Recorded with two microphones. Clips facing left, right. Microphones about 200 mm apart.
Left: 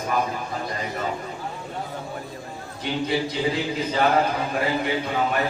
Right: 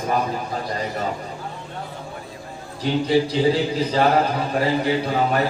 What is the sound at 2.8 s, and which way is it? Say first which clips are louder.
A man's voice: right 6 dB; 30° right (ahead or behind).